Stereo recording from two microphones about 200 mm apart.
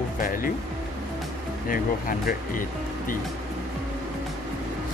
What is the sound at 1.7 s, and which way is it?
Speech, 45° left (ahead or behind).